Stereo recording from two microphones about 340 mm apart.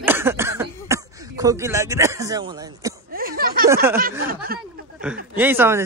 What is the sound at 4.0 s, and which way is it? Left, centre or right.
Speech, right.